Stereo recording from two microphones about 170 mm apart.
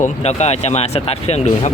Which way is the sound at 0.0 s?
40° left (ahead or behind).